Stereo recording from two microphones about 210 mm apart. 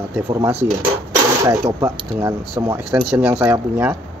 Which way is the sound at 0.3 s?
15° right (ahead or behind).